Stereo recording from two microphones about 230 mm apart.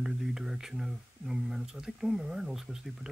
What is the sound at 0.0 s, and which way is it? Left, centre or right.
Speech, centre.